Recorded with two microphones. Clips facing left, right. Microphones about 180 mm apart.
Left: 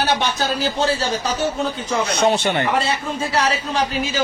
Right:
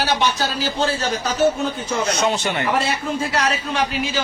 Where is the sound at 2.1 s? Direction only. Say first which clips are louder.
Left 3 dB; 35° left (ahead or behind).